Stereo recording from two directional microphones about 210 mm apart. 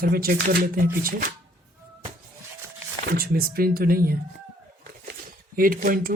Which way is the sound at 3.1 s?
45° right (ahead or behind).